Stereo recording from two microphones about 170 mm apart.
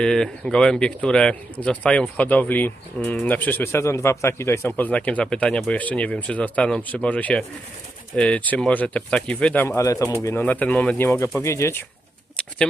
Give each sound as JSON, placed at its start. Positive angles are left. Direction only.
{"t": 0.0, "sound": "a man's voice", "side_deg": 5}